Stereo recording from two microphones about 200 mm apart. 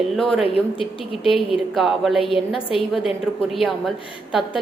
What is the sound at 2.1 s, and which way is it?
Speech, 25° left (ahead or behind).